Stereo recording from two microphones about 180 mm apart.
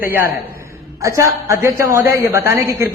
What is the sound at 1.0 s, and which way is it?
A man's voice, 15° right (ahead or behind).